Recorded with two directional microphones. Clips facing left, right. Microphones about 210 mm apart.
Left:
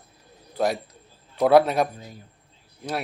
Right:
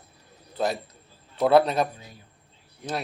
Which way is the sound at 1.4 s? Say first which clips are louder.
Left 2 dB; 10° left (ahead or behind).